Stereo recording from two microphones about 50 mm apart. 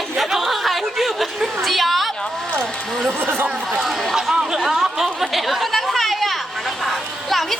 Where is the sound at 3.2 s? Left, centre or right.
Right.